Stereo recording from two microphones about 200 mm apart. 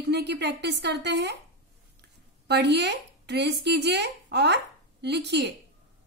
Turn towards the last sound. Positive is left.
turn(degrees=-60)  # may be behind; listen again after turning